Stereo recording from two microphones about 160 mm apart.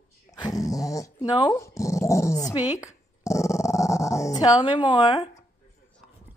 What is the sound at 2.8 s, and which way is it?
Dog, 20° left (ahead or behind).